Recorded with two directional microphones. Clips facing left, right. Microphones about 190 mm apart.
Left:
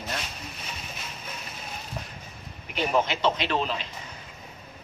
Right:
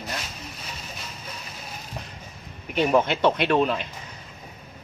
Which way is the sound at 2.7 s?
55° right (ahead or behind).